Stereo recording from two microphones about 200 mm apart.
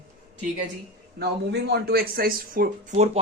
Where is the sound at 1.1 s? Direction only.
55° right (ahead or behind).